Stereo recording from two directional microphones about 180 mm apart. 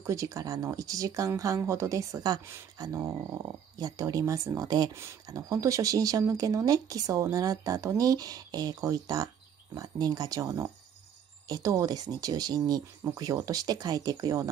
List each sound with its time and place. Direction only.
0.0 s speech: 15° right (ahead or behind)